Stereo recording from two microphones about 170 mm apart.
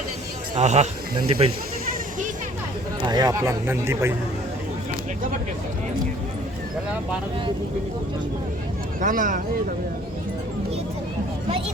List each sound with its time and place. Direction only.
0.5 s speech: 40° right (ahead or behind)
1.9 s a sound: 50° right (ahead or behind)
3.1 s speech: 20° right (ahead or behind)
9.0 s speech: 50° right (ahead or behind)